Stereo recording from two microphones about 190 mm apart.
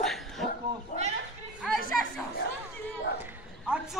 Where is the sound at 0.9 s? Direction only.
40° left (ahead or behind).